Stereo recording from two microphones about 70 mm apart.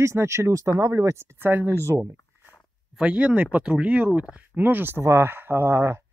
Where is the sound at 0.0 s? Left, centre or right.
Right.